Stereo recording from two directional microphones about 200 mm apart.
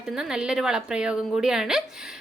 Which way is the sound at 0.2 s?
5° right (ahead or behind).